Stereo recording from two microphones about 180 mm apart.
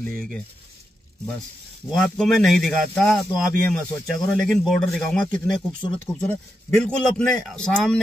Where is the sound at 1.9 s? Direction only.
5° left (ahead or behind).